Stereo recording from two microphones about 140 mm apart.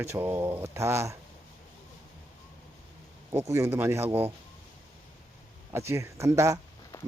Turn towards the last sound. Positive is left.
turn(degrees=-20)  # may be behind; listen again after turning